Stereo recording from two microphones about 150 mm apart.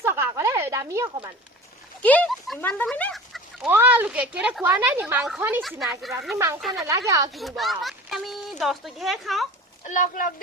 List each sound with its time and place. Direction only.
0.0 s a sound: 20° right (ahead or behind)
2.0 s speech: 10° left (ahead or behind)
3.7 s speech: 15° right (ahead or behind)
5.6 s speech: centre (ahead or behind)
6.3 s speech: 20° right (ahead or behind)
6.6 s speech: centre (ahead or behind)
6.8 s speech: 20° right (ahead or behind)
7.3 s speech: centre (ahead or behind)
9.8 s speech: 60° left (ahead or behind)